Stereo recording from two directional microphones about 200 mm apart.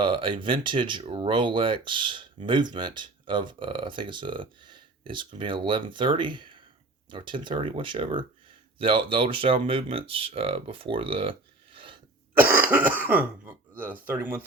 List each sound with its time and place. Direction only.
0.0 s speech: 25° right (ahead or behind)
12.4 s speech: 10° right (ahead or behind)